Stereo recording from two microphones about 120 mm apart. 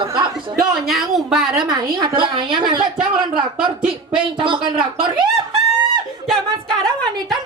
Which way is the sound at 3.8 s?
5° right (ahead or behind).